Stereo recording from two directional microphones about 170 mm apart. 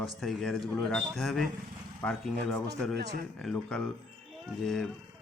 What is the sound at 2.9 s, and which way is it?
Speech, 75° right (ahead or behind).